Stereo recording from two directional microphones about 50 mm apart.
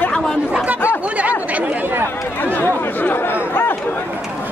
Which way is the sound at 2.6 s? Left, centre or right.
Left.